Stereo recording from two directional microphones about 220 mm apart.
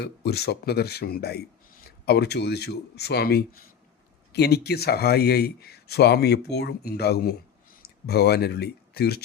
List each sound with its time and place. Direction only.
0.0 s speech: 45° left (ahead or behind)